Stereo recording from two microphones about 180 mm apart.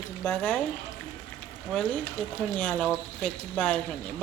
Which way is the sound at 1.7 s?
5° left (ahead or behind).